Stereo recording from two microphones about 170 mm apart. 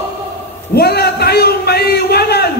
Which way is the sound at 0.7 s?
70° left (ahead or behind).